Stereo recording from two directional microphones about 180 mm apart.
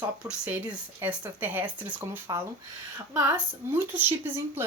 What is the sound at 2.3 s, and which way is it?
Speech, 20° right (ahead or behind).